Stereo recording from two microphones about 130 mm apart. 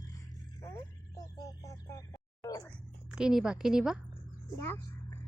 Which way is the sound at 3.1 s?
5° right (ahead or behind).